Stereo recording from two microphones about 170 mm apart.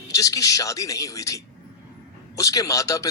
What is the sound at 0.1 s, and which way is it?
A man's voice, 20° left (ahead or behind).